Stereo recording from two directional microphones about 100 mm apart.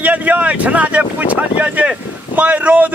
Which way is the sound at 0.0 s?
15° right (ahead or behind).